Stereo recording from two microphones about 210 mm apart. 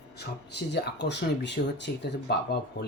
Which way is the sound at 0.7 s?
55° left (ahead or behind).